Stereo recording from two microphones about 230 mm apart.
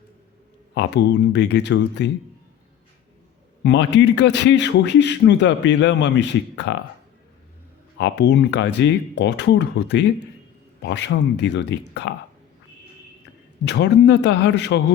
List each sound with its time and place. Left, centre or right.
0.7 s a man's voice: left
3.6 s a man's voice: left
7.9 s a man's voice: left
13.7 s a man's voice: left